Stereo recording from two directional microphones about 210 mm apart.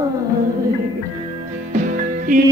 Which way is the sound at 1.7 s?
40° right (ahead or behind).